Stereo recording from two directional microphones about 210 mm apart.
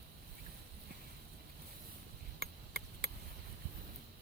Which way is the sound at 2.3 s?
50° right (ahead or behind).